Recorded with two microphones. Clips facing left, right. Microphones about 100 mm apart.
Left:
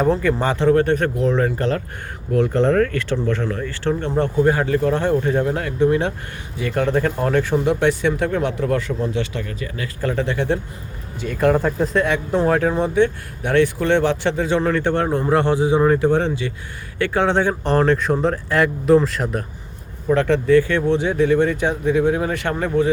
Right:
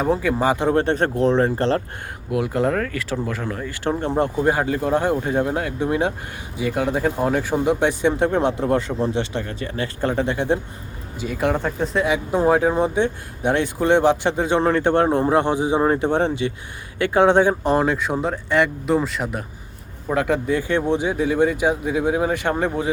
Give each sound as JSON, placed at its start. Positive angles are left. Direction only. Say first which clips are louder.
{"t": 0.0, "sound": "speech", "louder": "left 1 dB", "side_deg": -5}
{"t": 0.7, "sound": "speech", "louder": "left 3 dB", "side_deg": -25}
{"t": 2.3, "sound": "speech", "louder": "left 4 dB", "side_deg": -10}
{"t": 11.2, "sound": "speech", "louder": "left 4 dB", "side_deg": -5}